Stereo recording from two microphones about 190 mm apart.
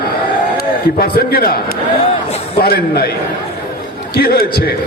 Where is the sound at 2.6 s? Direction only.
55° left (ahead or behind).